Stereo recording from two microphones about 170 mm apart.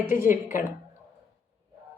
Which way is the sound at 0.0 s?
15° right (ahead or behind).